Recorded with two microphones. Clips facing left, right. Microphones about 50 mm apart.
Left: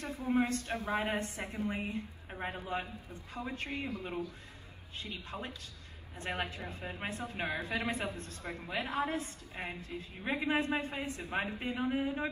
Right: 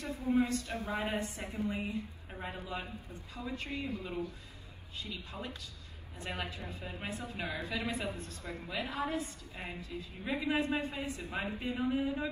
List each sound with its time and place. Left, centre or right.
0.3 s a woman's voice: left
1.5 s a woman's voice: left
2.4 s a woman's voice: left